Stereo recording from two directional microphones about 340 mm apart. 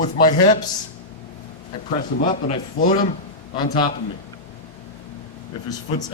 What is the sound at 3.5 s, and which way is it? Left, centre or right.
Speech, centre.